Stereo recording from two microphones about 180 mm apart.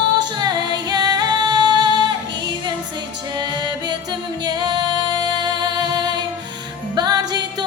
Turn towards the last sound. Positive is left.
turn(degrees=-25)  # may be behind; listen again after turning